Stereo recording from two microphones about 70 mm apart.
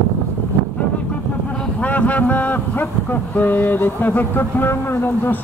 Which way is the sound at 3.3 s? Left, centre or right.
Left.